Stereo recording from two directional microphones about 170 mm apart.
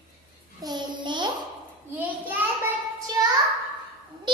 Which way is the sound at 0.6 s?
25° right (ahead or behind).